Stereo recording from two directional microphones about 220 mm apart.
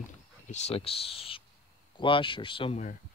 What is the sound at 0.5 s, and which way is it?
Speech, 30° left (ahead or behind).